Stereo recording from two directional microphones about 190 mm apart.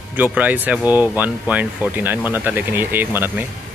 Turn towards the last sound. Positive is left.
turn(degrees=-10)  # may be behind; listen again after turning